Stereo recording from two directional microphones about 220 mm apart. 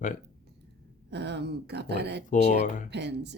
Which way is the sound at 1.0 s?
50° right (ahead or behind).